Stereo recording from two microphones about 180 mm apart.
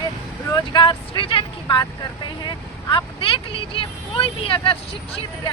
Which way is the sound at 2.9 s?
30° left (ahead or behind).